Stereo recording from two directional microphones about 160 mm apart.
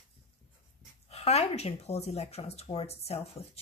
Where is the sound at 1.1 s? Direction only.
40° left (ahead or behind).